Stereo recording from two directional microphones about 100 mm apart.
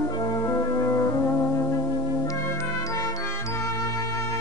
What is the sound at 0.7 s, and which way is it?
Music, 30° left (ahead or behind).